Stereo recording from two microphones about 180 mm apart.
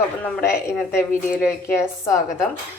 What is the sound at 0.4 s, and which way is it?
A woman's voice, 15° left (ahead or behind).